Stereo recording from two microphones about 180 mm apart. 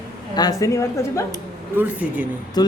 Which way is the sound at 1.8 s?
10° right (ahead or behind).